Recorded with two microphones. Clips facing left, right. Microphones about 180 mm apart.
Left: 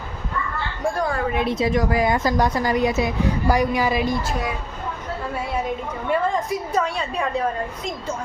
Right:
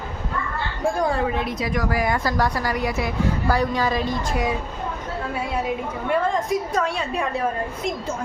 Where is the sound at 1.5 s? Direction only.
25° left (ahead or behind).